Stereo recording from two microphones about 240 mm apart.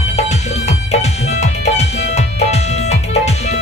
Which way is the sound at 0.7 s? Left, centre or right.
Left.